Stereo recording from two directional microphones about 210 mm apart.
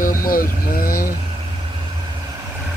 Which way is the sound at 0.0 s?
40° left (ahead or behind).